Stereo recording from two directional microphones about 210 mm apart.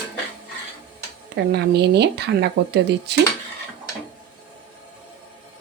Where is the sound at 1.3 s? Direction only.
55° right (ahead or behind).